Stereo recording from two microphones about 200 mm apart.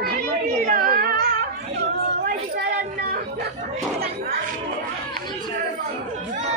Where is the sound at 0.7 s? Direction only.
45° right (ahead or behind).